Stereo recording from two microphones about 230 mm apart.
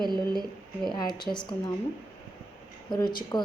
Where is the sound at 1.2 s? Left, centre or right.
Centre.